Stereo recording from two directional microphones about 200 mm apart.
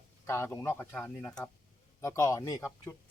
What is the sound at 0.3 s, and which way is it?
Speech, 15° left (ahead or behind).